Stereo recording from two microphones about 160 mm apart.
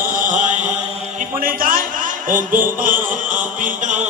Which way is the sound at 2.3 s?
55° right (ahead or behind).